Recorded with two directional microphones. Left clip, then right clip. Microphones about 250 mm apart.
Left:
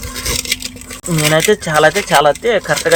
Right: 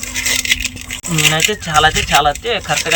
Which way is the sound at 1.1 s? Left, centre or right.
Centre.